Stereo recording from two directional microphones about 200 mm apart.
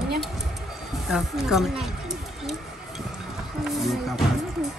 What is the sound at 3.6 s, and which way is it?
Speech, centre (ahead or behind).